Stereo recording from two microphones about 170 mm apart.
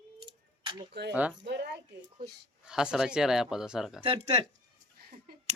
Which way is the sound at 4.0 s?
30° right (ahead or behind).